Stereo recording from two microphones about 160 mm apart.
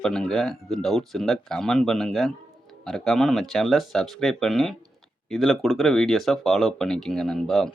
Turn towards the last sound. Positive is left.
turn(degrees=0)  # may be behind; listen again after turning